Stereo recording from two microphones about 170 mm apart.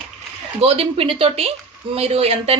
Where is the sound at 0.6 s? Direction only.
35° right (ahead or behind).